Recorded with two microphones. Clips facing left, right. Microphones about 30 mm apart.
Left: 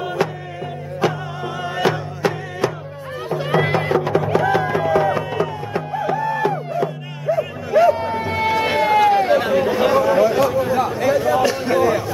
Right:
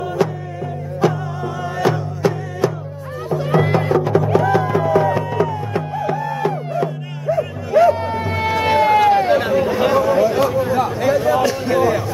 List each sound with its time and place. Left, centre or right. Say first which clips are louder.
0.2 s music: right 3 dB; centre
1.6 s music: right 1 dB; left
5.7 s music: right 1 dB; centre
9.5 s chatter: even; centre
10.5 s a sound: right 1 dB; centre